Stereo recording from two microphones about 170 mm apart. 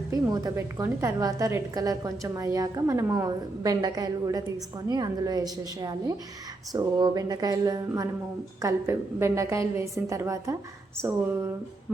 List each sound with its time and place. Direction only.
0.1 s a woman's voice: 20° right (ahead or behind)